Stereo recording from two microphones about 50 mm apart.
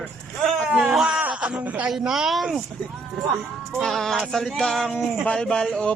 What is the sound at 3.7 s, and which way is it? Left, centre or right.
Speech, centre.